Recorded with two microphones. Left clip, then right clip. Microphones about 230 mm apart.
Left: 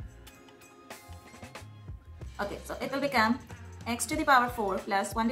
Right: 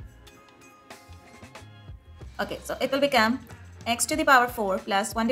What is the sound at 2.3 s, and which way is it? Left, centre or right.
A woman's voice, right.